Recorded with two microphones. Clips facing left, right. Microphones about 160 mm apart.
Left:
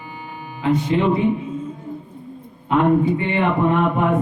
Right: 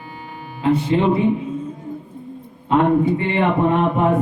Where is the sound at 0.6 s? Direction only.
30° right (ahead or behind).